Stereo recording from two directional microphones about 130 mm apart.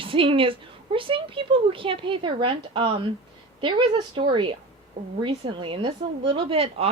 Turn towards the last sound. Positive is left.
turn(degrees=-45)  # may be behind; listen again after turning